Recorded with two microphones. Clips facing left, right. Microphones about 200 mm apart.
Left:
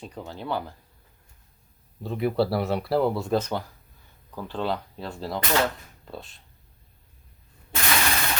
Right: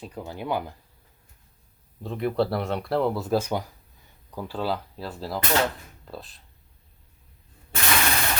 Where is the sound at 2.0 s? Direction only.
5° left (ahead or behind).